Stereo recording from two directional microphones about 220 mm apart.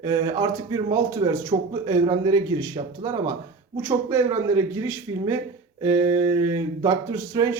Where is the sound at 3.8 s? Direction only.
10° right (ahead or behind).